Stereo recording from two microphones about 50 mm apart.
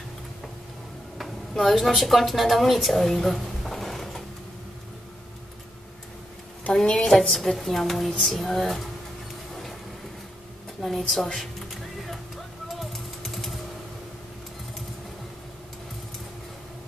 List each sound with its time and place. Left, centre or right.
1.1 s a woman's voice: centre
6.7 s a woman's voice: centre
7.1 s music: centre
10.8 s music: centre
12.6 s a sound: centre